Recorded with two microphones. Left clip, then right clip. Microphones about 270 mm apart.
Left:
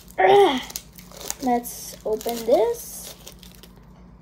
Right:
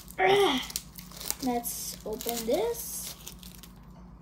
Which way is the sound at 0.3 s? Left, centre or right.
Centre.